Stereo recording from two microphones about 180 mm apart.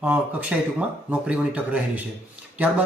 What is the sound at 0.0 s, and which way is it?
Speech, 10° right (ahead or behind).